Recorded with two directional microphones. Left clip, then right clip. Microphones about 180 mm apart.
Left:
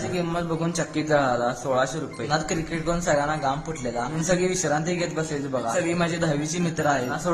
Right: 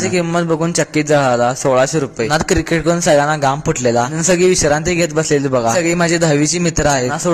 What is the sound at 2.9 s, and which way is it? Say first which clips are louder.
Speech: right 10 dB; 35° right (ahead or behind).